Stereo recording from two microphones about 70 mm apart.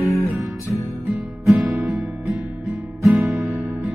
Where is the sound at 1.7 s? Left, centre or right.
Centre.